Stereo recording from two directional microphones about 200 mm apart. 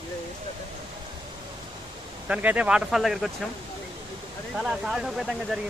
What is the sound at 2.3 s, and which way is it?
Speech, 5° right (ahead or behind).